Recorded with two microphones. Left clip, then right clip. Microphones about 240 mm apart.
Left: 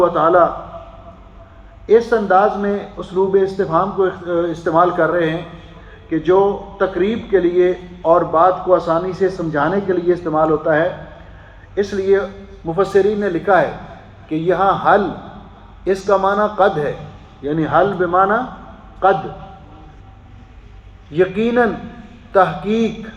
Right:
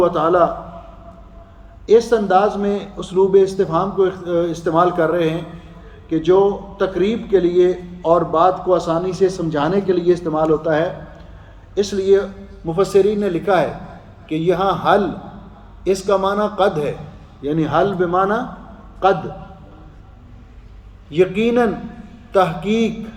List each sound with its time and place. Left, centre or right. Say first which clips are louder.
0.0 s a man's voice: left 2 dB; right
1.9 s a man's voice: even; right
21.2 s a man's voice: left 1 dB; right